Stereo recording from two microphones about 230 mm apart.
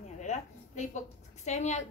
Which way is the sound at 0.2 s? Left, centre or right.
Left.